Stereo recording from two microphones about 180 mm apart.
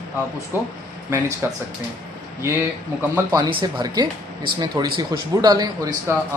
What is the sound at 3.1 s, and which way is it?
Speech, 20° right (ahead or behind).